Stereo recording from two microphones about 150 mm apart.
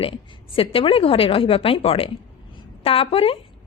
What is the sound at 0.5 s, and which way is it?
A woman's voice, 40° left (ahead or behind).